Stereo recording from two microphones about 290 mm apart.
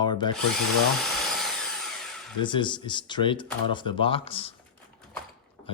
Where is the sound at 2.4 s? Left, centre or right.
Centre.